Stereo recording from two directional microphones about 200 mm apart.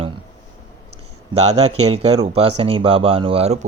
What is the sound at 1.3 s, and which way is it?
Speech, 30° right (ahead or behind).